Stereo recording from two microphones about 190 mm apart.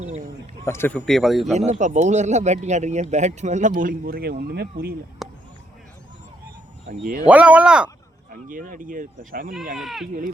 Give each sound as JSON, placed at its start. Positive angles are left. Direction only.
{"t": 0.0, "sound": "a sound", "side_deg": -35}
{"t": 0.6, "sound": "speech", "side_deg": 15}
{"t": 1.5, "sound": "speech", "side_deg": -35}
{"t": 5.2, "sound": "a sound", "side_deg": 0}
{"t": 6.8, "sound": "speech", "side_deg": -50}
{"t": 7.3, "sound": "speech", "side_deg": -5}
{"t": 8.3, "sound": "speech", "side_deg": -45}
{"t": 9.7, "sound": "speech", "side_deg": 0}